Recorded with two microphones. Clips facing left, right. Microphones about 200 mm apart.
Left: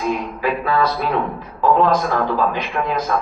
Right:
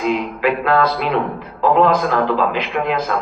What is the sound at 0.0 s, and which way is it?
A man's voice, 90° right.